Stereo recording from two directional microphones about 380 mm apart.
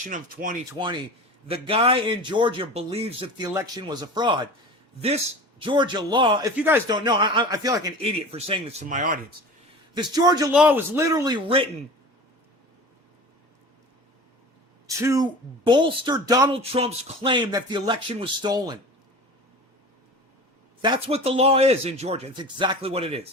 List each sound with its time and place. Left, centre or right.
0.0 s a man's voice: right
15.0 s a man's voice: centre
20.8 s a man's voice: centre